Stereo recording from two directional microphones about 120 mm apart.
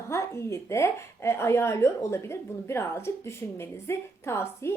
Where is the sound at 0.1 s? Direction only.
25° left (ahead or behind).